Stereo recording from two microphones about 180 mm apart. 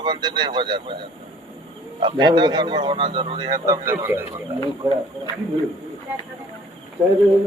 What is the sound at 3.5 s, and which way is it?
Speech, 15° right (ahead or behind).